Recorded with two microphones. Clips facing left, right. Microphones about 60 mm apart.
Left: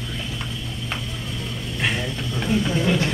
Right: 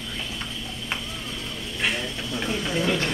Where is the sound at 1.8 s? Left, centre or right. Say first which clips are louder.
Left 2 dB; centre.